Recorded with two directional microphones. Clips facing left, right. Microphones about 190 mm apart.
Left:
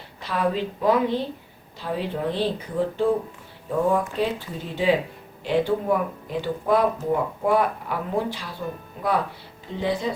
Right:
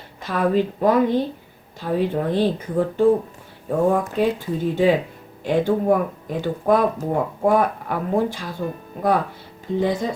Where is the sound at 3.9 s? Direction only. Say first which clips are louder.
Right 3 dB; 45° right (ahead or behind).